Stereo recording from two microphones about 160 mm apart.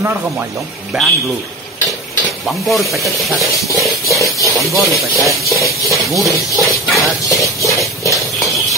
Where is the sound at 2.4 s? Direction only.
Centre (ahead or behind).